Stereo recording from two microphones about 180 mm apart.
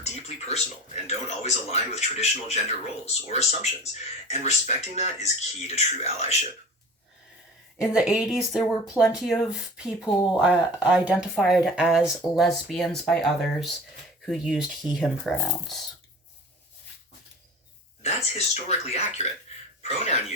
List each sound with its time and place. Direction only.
0.0 s speech: 35° left (ahead or behind)
7.8 s speech: 5° right (ahead or behind)
18.0 s speech: 35° left (ahead or behind)